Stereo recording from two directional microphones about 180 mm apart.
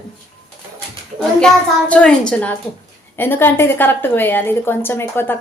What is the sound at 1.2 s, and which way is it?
A child's voice, 5° left (ahead or behind).